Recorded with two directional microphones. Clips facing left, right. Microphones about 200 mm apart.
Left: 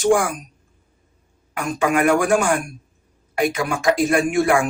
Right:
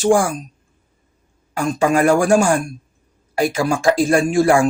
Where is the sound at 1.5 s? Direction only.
30° right (ahead or behind).